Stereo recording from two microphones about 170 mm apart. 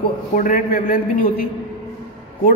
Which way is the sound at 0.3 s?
55° left (ahead or behind).